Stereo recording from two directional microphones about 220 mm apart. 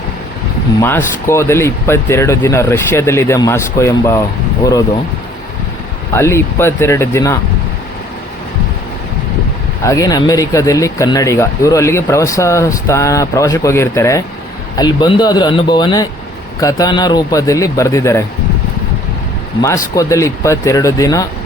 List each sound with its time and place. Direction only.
0.8 s speech: 10° left (ahead or behind)
6.1 s speech: 10° left (ahead or behind)
9.8 s speech: 15° left (ahead or behind)
19.6 s speech: 15° left (ahead or behind)